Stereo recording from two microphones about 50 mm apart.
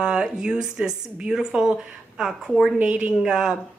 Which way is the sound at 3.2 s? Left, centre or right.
Centre.